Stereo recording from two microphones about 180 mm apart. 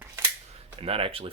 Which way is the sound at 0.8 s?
30° right (ahead or behind).